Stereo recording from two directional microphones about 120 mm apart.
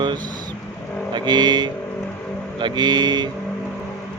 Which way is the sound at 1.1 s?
40° right (ahead or behind).